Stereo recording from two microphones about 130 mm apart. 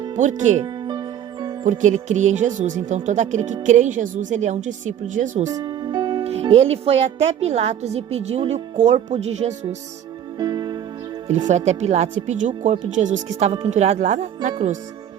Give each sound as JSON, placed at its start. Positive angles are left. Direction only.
{"t": 0.2, "sound": "speech", "side_deg": -70}
{"t": 0.6, "sound": "music", "side_deg": -35}
{"t": 1.6, "sound": "speech", "side_deg": -70}
{"t": 5.5, "sound": "music", "side_deg": -30}
{"t": 6.2, "sound": "a woman's voice", "side_deg": -50}
{"t": 10.3, "sound": "music", "side_deg": -30}
{"t": 11.4, "sound": "speech", "side_deg": -60}
{"t": 13.7, "sound": "speech", "side_deg": -55}